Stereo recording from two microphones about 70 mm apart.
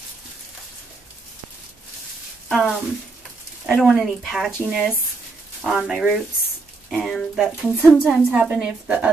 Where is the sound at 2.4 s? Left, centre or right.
Centre.